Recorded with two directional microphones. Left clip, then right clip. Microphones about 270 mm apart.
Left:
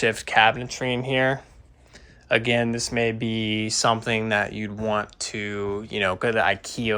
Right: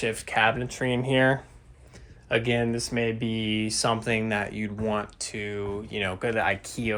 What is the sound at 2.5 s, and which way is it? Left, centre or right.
Speech, centre.